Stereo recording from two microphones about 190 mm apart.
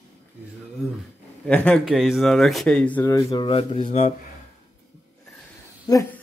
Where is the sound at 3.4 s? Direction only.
30° left (ahead or behind).